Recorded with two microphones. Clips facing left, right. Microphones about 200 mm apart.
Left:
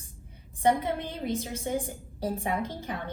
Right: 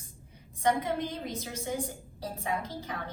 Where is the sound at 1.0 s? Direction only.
55° left (ahead or behind).